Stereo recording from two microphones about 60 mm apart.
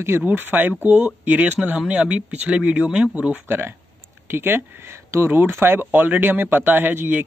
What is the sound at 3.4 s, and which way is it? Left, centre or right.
Speech, right.